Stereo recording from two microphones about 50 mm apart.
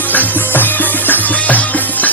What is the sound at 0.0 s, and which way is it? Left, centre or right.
Music, left.